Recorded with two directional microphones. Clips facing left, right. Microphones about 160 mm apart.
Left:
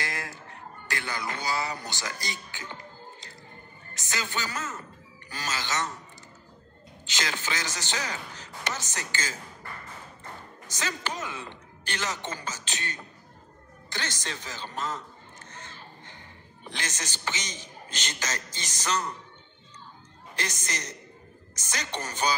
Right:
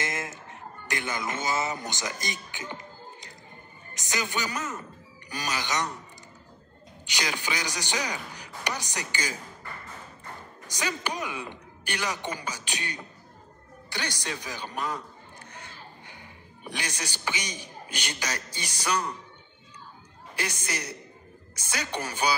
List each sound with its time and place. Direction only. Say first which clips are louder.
0.0 s a sound: right 3 dB; 20° right (ahead or behind)
3.9 s a man's voice: right 2 dB; 15° right (ahead or behind)
7.1 s a man's voice: right 1 dB; 15° right (ahead or behind)
10.7 s a man's voice: right 2 dB; 15° right (ahead or behind)
20.3 s a man's voice: right 2 dB; 10° right (ahead or behind)